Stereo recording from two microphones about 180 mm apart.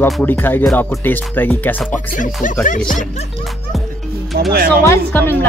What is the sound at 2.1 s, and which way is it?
Speech, 45° left (ahead or behind).